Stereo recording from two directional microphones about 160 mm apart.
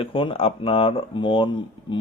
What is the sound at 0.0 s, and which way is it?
Speech, 35° left (ahead or behind).